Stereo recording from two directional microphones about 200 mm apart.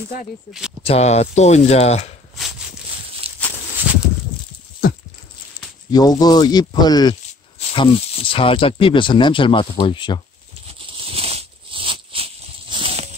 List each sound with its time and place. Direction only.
0.5 s speech: 5° right (ahead or behind)
0.8 s speech: 30° left (ahead or behind)
3.3 s a sound: 30° right (ahead or behind)
3.9 s a sound: 5° right (ahead or behind)
5.9 s speech: 20° left (ahead or behind)
11.1 s snake: 30° right (ahead or behind)